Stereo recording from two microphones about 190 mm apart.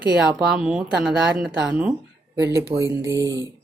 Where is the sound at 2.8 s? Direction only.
15° right (ahead or behind).